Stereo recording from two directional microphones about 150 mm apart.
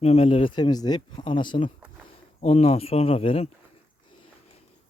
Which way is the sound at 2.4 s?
40° left (ahead or behind).